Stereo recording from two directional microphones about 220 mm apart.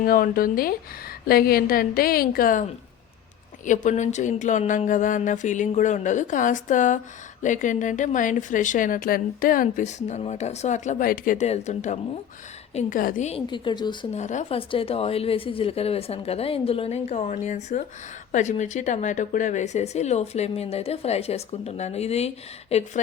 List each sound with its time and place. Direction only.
0.0 s a woman's voice: 40° left (ahead or behind)
3.7 s a woman's voice: 35° left (ahead or behind)